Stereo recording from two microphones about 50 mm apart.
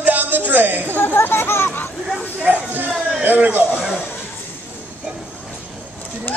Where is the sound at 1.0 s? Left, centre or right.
Left.